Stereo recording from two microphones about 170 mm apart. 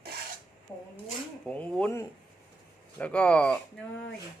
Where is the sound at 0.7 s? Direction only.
15° left (ahead or behind).